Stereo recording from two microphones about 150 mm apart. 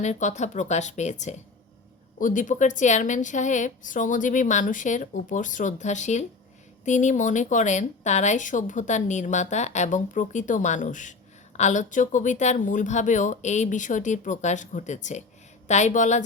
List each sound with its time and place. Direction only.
0.0 s a woman's voice: 50° left (ahead or behind)
2.1 s a woman's voice: 60° left (ahead or behind)